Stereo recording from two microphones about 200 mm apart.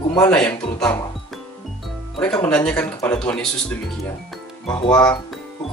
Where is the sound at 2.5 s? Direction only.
5° left (ahead or behind).